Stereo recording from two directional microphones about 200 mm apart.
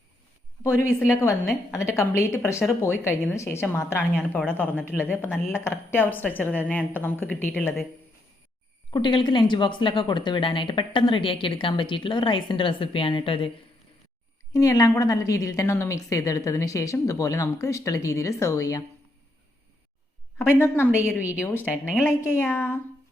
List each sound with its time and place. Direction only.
0.6 s a woman's voice: 15° left (ahead or behind)
8.9 s speech: 25° left (ahead or behind)
14.5 s a woman's voice: 15° left (ahead or behind)
20.6 s a woman's voice: 10° left (ahead or behind)
21.6 s speech: 5° right (ahead or behind)
22.0 s a woman's voice: 10° left (ahead or behind)